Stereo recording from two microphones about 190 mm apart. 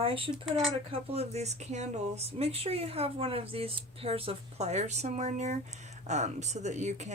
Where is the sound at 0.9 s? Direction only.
30° right (ahead or behind).